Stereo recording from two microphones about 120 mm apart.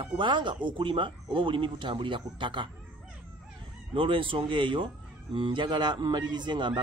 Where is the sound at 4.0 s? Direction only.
45° right (ahead or behind).